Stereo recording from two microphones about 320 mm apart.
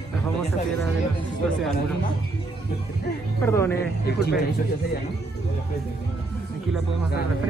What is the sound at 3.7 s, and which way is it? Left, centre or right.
Speech, left.